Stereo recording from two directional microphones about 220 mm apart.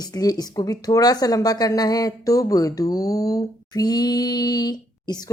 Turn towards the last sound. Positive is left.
turn(degrees=20)  # may be behind; listen again after turning